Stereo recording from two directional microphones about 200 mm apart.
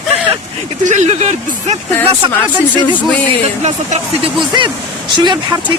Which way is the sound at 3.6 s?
35° right (ahead or behind).